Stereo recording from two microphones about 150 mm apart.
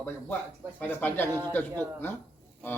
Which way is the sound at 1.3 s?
25° right (ahead or behind).